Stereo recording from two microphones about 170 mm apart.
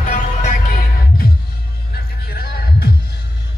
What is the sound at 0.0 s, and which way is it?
Music, 45° left (ahead or behind).